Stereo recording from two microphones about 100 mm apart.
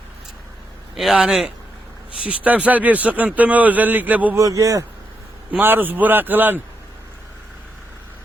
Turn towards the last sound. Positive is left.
turn(degrees=-20)  # may be behind; listen again after turning